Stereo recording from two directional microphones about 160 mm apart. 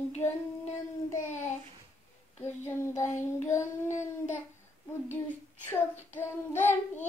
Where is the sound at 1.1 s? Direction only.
50° left (ahead or behind).